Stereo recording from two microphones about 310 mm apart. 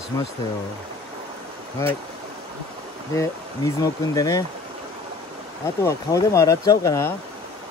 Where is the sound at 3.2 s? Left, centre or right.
Centre.